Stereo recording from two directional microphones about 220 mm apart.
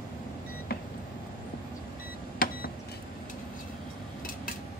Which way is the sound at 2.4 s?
40° left (ahead or behind).